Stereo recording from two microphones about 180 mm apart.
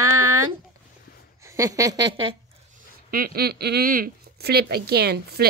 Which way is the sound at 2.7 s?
55° right (ahead or behind).